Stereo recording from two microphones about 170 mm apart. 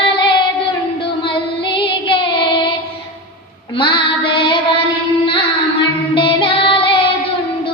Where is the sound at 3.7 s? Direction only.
30° left (ahead or behind).